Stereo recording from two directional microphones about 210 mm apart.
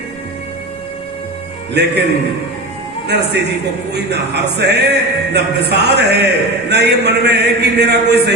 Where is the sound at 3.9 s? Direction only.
50° right (ahead or behind).